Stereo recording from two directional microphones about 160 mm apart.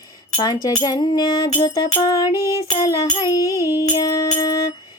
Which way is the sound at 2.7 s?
25° left (ahead or behind).